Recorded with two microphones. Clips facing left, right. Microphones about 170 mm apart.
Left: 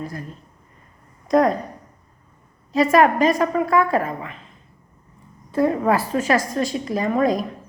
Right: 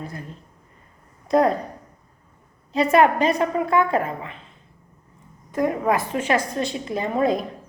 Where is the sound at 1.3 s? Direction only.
30° right (ahead or behind).